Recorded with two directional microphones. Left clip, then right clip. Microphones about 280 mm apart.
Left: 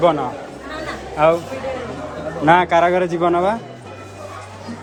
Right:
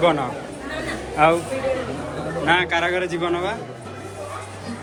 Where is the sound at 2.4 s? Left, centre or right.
Centre.